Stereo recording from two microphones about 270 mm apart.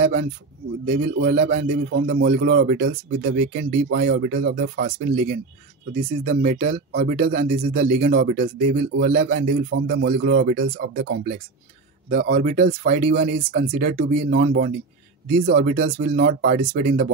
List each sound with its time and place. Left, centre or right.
0.0 s speech: right
1.5 s a man's voice: right
7.2 s a man's voice: right
8.1 s speech: right